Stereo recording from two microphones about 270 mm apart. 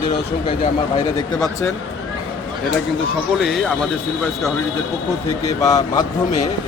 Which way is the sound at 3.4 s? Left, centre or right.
Centre.